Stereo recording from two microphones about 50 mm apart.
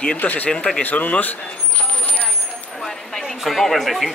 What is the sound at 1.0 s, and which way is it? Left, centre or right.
Speech, left.